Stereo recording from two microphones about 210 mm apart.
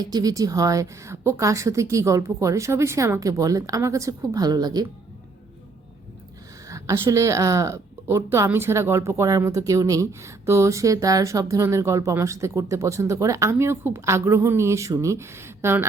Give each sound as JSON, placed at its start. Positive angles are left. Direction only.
{"t": 0.0, "sound": "a woman's voice", "side_deg": -20}
{"t": 6.7, "sound": "a woman's voice", "side_deg": -15}